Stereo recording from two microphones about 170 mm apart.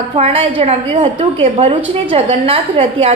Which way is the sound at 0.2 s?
35° right (ahead or behind).